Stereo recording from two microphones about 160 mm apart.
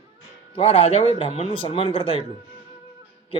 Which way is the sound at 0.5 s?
35° left (ahead or behind).